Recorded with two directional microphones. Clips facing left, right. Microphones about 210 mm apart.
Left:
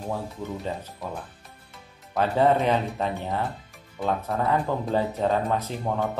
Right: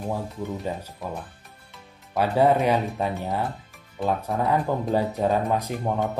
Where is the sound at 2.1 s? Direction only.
10° right (ahead or behind).